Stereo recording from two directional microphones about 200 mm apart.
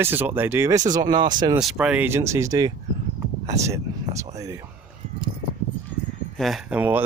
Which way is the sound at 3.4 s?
15° right (ahead or behind).